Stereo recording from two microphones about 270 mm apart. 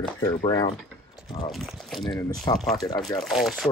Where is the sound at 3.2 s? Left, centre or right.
Centre.